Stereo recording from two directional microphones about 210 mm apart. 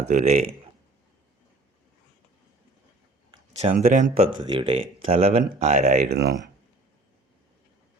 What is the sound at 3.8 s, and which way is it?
Speech, 35° right (ahead or behind).